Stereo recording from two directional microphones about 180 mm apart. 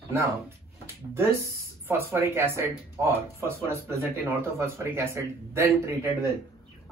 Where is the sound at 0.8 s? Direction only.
15° right (ahead or behind).